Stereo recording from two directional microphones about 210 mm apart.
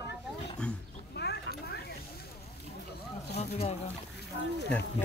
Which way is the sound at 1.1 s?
50° left (ahead or behind).